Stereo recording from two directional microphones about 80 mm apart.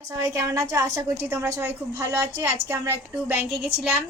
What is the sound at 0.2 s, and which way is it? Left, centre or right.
A woman's voice, right.